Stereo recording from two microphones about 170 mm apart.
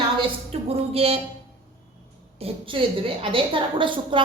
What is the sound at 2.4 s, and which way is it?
A woman's voice, 35° right (ahead or behind).